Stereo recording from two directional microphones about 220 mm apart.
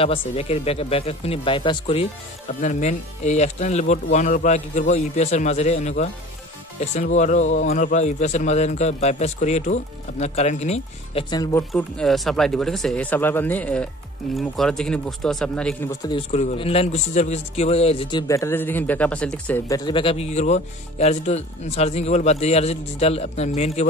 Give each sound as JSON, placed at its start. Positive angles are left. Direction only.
{"t": 0.0, "sound": "speech", "side_deg": 25}
{"t": 11.7, "sound": "speech", "side_deg": 0}
{"t": 16.1, "sound": "speech", "side_deg": 25}